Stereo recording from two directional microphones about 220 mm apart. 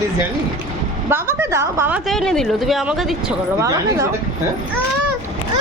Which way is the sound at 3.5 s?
15° right (ahead or behind).